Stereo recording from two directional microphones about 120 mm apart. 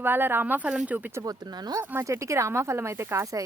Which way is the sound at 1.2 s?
30° right (ahead or behind).